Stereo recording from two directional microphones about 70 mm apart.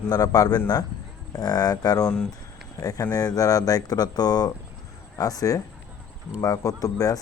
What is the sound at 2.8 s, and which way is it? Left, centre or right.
Speech, left.